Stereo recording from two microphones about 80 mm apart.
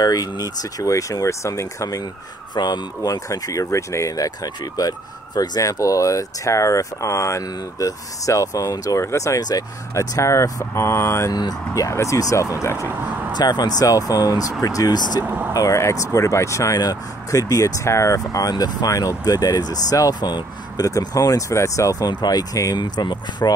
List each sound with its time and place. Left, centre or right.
0.0 s speech: left
2.5 s speech: left
5.6 s speech: left
9.4 s speech: left
9.9 s speech: left
11.3 s speech: left
13.4 s speech: left
15.1 s speech: right
15.5 s speech: left
22.1 s speech: left